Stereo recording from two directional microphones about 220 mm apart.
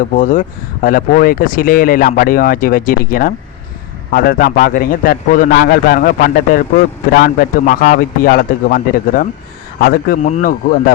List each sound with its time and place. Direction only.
0.2 s a man's voice: 35° left (ahead or behind)